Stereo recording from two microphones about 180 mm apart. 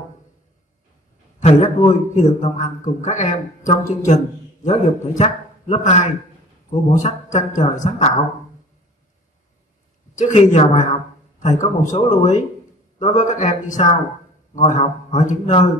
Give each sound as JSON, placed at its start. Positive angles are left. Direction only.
{"t": 1.4, "sound": "a man's voice", "side_deg": 40}
{"t": 10.1, "sound": "a man's voice", "side_deg": 40}